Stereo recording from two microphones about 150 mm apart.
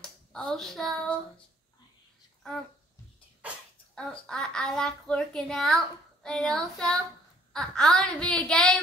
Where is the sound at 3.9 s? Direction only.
5° left (ahead or behind).